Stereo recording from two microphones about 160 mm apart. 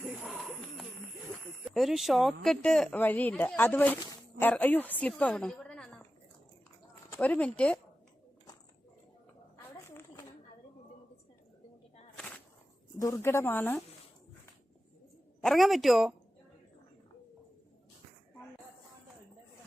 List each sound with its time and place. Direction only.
0.0 s bird: 5° right (ahead or behind)
1.6 s a woman's voice: centre (ahead or behind)
7.1 s speech: 10° left (ahead or behind)
9.7 s a sound: 15° left (ahead or behind)
12.1 s a sound: 5° left (ahead or behind)
13.0 s speech: 20° left (ahead or behind)
15.4 s speech: centre (ahead or behind)